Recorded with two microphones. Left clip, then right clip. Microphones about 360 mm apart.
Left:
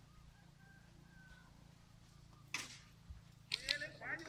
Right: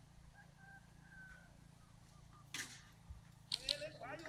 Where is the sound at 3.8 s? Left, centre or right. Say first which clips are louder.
Left 3 dB; centre.